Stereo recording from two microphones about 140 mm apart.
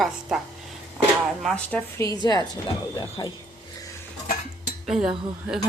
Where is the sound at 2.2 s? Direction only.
30° left (ahead or behind).